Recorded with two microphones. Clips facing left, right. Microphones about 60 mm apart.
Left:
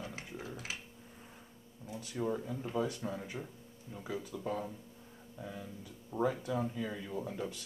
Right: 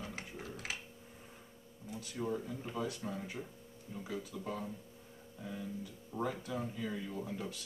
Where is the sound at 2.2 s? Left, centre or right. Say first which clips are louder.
Left 3 dB; centre.